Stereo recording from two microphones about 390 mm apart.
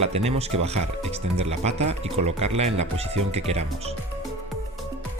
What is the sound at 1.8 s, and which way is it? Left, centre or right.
Speech, right.